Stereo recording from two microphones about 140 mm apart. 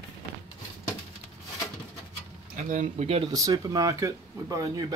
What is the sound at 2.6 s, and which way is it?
Speech, 65° right (ahead or behind).